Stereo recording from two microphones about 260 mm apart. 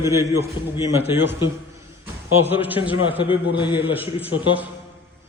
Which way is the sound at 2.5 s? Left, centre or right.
Centre.